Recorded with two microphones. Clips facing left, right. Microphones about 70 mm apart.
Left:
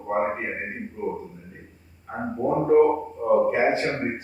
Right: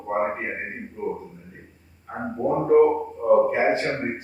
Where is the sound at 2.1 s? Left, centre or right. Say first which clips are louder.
Even; centre.